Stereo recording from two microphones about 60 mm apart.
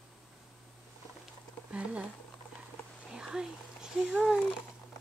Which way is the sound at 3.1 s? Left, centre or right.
Centre.